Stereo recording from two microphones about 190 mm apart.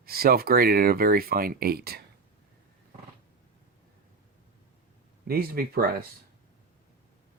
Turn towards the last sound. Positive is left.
turn(degrees=-50)  # may be behind; listen again after turning